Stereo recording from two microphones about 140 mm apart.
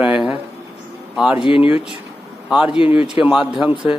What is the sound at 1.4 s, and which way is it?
Speech, 40° left (ahead or behind).